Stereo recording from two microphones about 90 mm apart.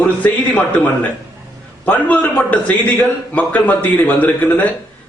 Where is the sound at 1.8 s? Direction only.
15° left (ahead or behind).